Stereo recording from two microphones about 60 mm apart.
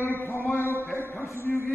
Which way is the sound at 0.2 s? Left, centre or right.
Left.